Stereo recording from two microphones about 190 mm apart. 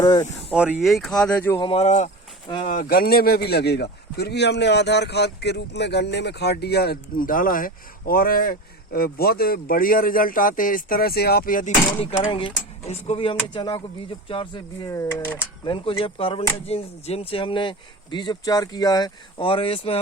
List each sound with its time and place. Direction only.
0.0 s speech: 20° left (ahead or behind)
0.5 s speech: centre (ahead or behind)
1.5 s a man's voice: 25° left (ahead or behind); by 11.7 s 45° left (ahead or behind)
11.9 s speech: 30° left (ahead or behind)